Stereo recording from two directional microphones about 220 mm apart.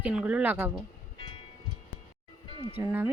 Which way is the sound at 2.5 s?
20° left (ahead or behind).